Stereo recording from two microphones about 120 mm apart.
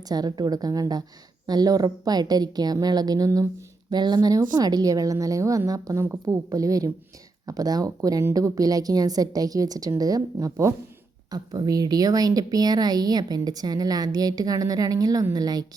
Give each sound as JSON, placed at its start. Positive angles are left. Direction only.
{"t": 0.1, "sound": "a woman's voice", "side_deg": -35}